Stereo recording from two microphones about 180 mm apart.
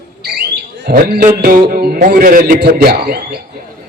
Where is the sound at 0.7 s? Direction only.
65° right (ahead or behind).